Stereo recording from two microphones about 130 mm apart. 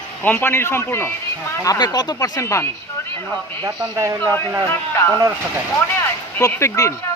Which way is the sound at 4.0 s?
25° right (ahead or behind).